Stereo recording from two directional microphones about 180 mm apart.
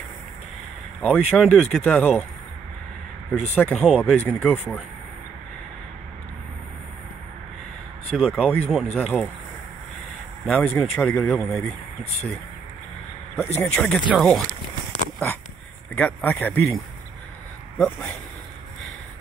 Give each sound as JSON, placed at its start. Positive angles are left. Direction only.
{"t": 1.0, "sound": "speech", "side_deg": 5}
{"t": 3.3, "sound": "speech", "side_deg": 5}
{"t": 8.1, "sound": "speech", "side_deg": 0}
{"t": 10.4, "sound": "speech", "side_deg": 0}
{"t": 13.6, "sound": "speech", "side_deg": 5}
{"t": 15.9, "sound": "speech", "side_deg": 10}